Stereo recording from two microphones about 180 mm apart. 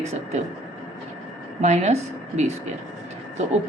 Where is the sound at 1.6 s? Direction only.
40° right (ahead or behind).